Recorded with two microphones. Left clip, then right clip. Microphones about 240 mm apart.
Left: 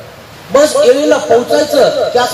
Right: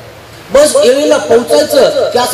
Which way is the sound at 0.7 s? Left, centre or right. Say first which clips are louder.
Right 1 dB; right.